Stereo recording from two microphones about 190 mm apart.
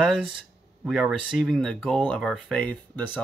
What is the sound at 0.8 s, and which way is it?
Speech, centre (ahead or behind).